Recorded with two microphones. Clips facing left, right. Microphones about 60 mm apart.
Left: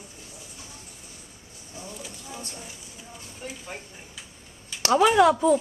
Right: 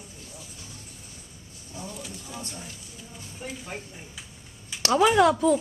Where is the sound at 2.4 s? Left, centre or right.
Centre.